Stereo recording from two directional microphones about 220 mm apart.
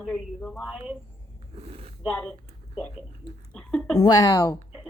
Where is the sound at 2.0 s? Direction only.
5° left (ahead or behind).